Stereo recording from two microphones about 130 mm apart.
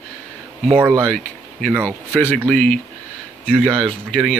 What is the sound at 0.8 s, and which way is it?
Speech, 15° right (ahead or behind).